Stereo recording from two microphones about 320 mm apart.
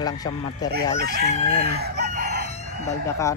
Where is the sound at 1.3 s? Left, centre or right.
Centre.